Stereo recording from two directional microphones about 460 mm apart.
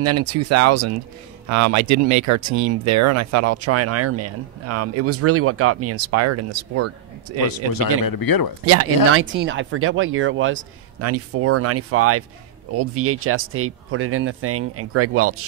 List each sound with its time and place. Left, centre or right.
0.0 s speech: right
7.7 s speech: left
8.6 s speech: right